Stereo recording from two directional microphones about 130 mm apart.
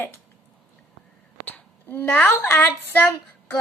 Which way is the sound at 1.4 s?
15° left (ahead or behind).